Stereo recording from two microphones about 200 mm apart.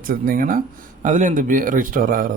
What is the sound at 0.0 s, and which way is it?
Speech, 45° right (ahead or behind).